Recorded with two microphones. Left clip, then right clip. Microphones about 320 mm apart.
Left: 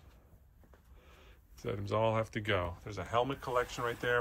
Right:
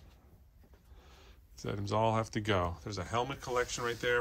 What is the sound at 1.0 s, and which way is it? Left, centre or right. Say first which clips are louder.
Speech: right 2 dB; centre.